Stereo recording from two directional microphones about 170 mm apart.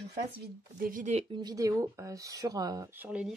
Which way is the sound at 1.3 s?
25° right (ahead or behind).